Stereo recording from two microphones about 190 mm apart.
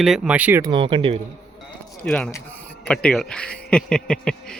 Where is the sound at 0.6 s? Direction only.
25° right (ahead or behind).